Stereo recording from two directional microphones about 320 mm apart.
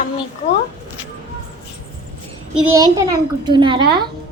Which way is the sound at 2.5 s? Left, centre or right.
Centre.